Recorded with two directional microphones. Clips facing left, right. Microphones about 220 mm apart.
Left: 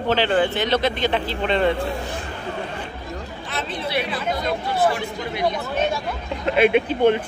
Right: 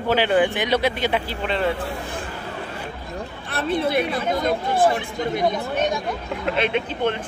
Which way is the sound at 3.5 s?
60° right (ahead or behind).